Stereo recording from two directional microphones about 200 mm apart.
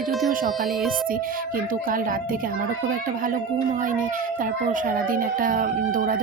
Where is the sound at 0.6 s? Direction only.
Centre (ahead or behind).